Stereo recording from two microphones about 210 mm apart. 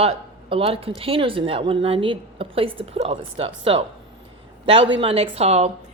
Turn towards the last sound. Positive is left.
turn(degrees=-30)  # may be behind; listen again after turning